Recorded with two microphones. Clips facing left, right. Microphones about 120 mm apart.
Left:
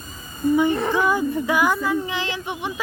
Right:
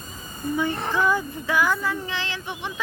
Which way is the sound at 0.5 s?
15° left (ahead or behind).